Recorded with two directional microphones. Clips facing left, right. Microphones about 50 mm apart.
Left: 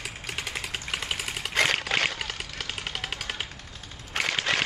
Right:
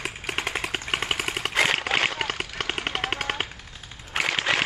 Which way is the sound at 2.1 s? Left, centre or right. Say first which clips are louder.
Right 6 dB; right.